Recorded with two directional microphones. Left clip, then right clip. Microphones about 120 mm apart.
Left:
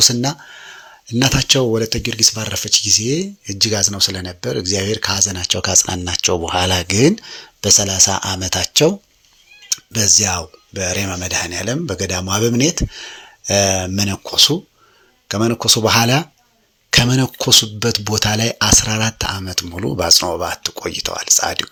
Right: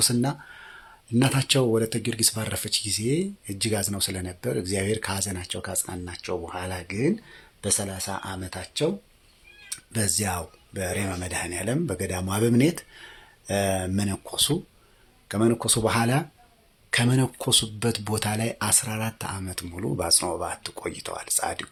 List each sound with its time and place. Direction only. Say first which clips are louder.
0.0 s speech: left 11 dB; 30° left (ahead or behind)
5.4 s speech: left 15 dB; 40° left (ahead or behind)
5.6 s speech: left 17 dB; 60° left (ahead or behind)
7.3 s speech: left 14 dB; 40° left (ahead or behind); by 8.9 s 70° left (ahead or behind)
9.6 s speech: left 14 dB; 25° left (ahead or behind)
15.9 s speech: left 10 dB; 40° left (ahead or behind)